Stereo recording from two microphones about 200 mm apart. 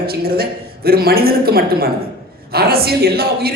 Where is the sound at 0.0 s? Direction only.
50° right (ahead or behind).